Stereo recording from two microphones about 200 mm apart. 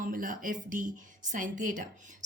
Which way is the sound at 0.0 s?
40° right (ahead or behind).